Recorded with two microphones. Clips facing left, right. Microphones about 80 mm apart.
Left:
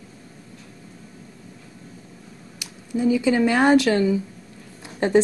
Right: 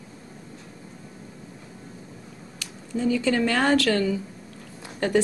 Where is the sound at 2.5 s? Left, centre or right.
Centre.